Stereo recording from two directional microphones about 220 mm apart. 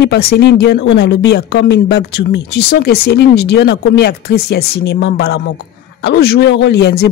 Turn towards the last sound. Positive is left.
turn(degrees=50)  # may be behind; listen again after turning